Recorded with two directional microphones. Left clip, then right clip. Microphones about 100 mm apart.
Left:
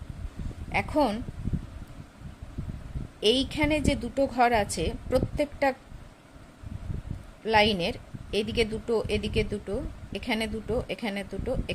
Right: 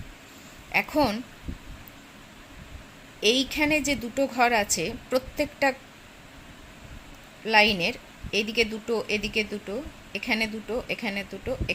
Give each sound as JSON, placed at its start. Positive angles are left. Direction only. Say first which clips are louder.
{"t": 0.7, "sound": "speech", "louder": "right 2 dB", "side_deg": 15}
{"t": 3.2, "sound": "a woman's voice", "louder": "right 1 dB", "side_deg": 20}
{"t": 7.4, "sound": "a woman's voice", "louder": "right 2 dB", "side_deg": 25}